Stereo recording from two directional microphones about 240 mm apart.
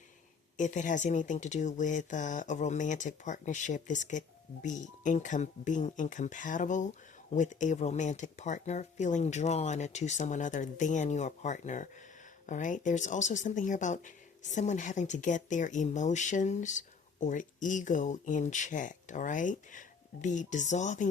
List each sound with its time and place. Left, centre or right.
0.5 s speech: left